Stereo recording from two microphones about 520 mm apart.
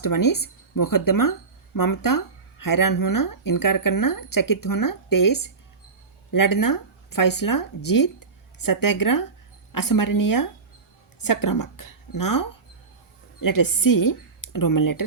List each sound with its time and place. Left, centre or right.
0.0 s speech: left